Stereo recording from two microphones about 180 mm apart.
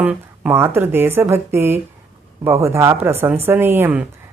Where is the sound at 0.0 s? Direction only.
10° right (ahead or behind).